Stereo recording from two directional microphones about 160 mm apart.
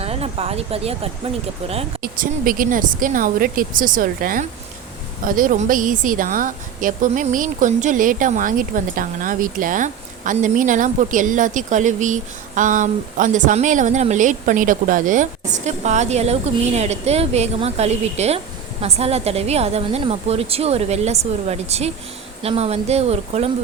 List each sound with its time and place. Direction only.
0.0 s a woman's voice: 40° right (ahead or behind)
2.0 s a woman's voice: 65° right (ahead or behind); by 23.5 s 40° right (ahead or behind)